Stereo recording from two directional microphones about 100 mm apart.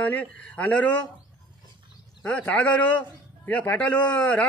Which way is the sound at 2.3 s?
15° left (ahead or behind).